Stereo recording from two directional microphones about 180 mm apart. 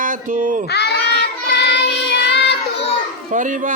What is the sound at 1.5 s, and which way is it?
Child singing, 65° left (ahead or behind).